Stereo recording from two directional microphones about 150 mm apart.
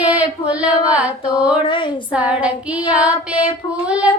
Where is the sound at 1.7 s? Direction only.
30° left (ahead or behind).